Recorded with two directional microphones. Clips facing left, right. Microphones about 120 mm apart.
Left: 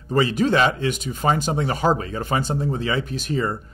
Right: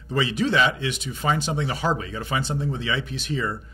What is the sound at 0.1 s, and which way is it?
Speech, 45° left (ahead or behind).